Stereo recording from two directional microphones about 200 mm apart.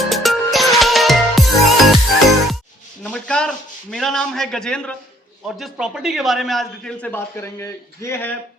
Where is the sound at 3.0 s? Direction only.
5° left (ahead or behind).